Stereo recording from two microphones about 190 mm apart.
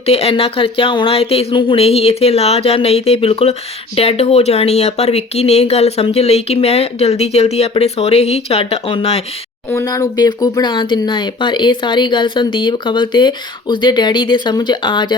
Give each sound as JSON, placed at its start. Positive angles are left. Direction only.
{"t": 0.0, "sound": "speech", "side_deg": 30}
{"t": 9.6, "sound": "speech", "side_deg": 15}